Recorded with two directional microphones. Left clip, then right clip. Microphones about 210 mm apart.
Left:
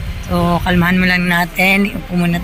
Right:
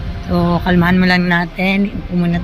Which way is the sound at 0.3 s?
10° right (ahead or behind).